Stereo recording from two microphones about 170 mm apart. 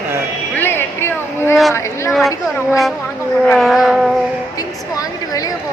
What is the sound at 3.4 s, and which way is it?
Speech, centre (ahead or behind).